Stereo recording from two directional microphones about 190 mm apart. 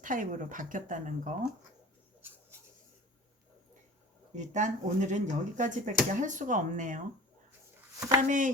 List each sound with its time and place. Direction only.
0.0 s speech: 45° right (ahead or behind)
4.4 s speech: 40° right (ahead or behind)
8.3 s speech: 45° right (ahead or behind)